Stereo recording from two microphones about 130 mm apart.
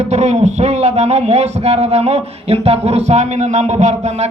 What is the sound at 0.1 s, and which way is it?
A man's voice, 60° right (ahead or behind).